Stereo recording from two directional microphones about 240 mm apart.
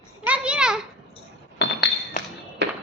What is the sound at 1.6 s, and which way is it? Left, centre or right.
Chink, left.